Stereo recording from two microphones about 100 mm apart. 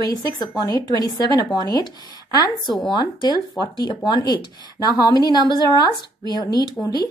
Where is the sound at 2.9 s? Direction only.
50° left (ahead or behind).